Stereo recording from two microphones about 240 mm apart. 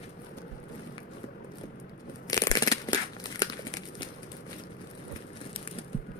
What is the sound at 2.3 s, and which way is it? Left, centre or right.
Crumpling, centre.